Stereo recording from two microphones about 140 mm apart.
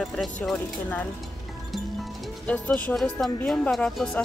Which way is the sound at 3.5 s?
5° left (ahead or behind).